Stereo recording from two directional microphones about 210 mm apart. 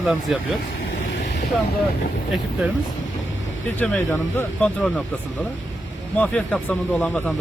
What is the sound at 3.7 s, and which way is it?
Speech, 10° left (ahead or behind).